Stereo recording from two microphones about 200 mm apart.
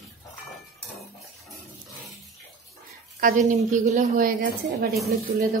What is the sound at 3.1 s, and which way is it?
A woman's voice, 40° right (ahead or behind).